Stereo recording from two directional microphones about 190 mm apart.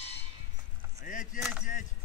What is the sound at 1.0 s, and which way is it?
Chop, 45° left (ahead or behind).